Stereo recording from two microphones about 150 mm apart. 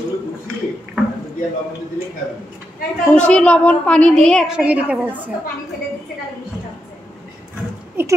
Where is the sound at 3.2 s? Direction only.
5° left (ahead or behind).